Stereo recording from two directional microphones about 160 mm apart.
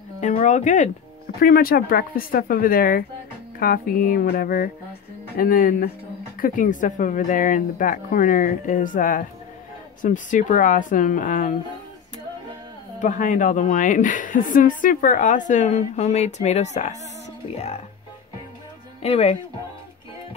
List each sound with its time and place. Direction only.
0.4 s speech: 45° left (ahead or behind)
1.4 s speech: 70° left (ahead or behind); by 11.5 s 55° left (ahead or behind)
13.0 s speech: 55° left (ahead or behind)
19.0 s speech: 40° left (ahead or behind)